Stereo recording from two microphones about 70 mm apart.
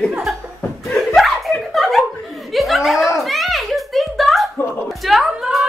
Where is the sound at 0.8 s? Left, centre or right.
Centre.